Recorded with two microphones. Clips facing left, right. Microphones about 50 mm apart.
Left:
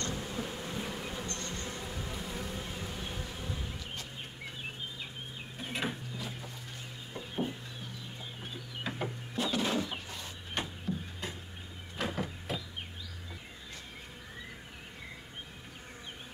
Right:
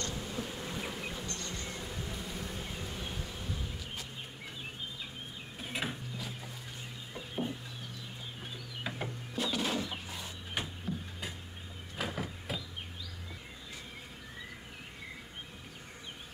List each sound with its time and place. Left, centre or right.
0.1 s bee: centre
1.2 s bee: left
1.7 s bee: centre
5.6 s mechanisms: centre
7.2 s chicken: centre
8.8 s music: centre
10.0 s chicken: centre
10.6 s music: centre
12.0 s a sound: centre